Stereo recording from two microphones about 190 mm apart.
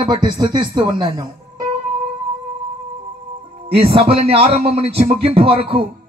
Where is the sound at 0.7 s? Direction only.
25° right (ahead or behind).